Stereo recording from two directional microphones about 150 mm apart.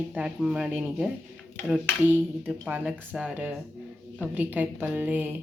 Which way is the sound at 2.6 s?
5° right (ahead or behind).